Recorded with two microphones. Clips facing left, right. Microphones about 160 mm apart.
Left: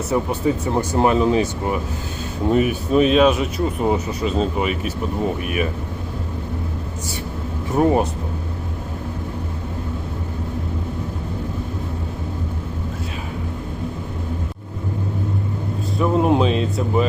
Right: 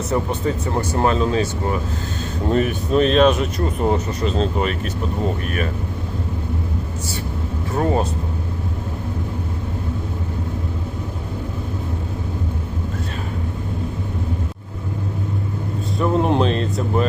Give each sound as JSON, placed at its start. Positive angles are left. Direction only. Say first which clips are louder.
{"t": 0.1, "sound": "speech", "louder": "left 2 dB", "side_deg": 10}
{"t": 7.8, "sound": "speech", "louder": "left 3 dB", "side_deg": 15}
{"t": 16.0, "sound": "a sound", "louder": "left 1 dB", "side_deg": 5}